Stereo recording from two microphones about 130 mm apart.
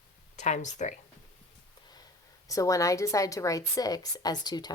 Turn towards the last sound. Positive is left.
turn(degrees=30)  # may be behind; listen again after turning